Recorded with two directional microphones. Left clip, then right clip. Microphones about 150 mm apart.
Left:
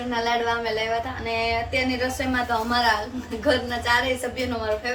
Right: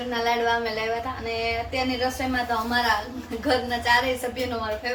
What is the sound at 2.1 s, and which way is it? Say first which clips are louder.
A woman's voice: left 1 dB; 15° left (ahead or behind).